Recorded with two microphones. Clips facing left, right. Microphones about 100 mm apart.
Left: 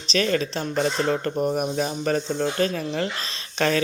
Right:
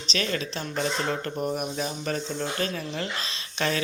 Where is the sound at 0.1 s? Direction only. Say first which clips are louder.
Left 7 dB; 40° left (ahead or behind).